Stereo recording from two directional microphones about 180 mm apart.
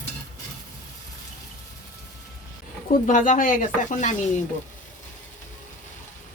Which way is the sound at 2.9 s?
45° left (ahead or behind).